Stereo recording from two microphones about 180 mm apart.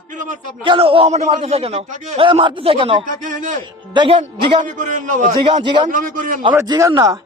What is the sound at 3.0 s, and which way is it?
Speech, 45° right (ahead or behind).